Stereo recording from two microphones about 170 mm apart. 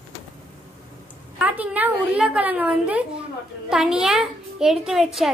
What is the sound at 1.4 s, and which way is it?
A woman's voice, 10° right (ahead or behind).